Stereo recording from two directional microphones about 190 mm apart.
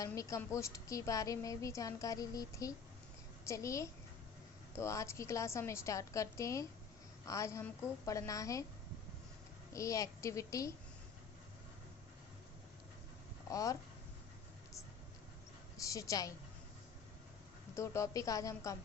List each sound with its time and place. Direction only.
0.0 s a woman's voice: 15° left (ahead or behind)
9.7 s a woman's voice: 15° left (ahead or behind)
13.5 s a woman's voice: 15° left (ahead or behind)
15.8 s a woman's voice: 15° left (ahead or behind)
17.7 s a woman's voice: 15° left (ahead or behind)